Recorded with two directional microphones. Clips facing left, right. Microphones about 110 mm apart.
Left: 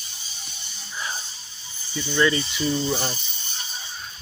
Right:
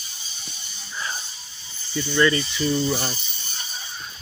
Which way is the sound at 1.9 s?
15° left (ahead or behind).